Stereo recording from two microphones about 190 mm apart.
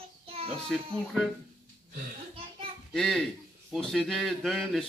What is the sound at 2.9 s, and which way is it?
Speech, centre (ahead or behind).